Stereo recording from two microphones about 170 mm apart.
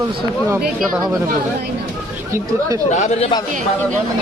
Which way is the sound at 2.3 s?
20° right (ahead or behind).